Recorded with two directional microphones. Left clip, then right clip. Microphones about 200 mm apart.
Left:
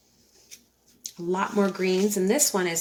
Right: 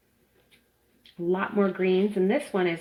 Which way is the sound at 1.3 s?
20° right (ahead or behind).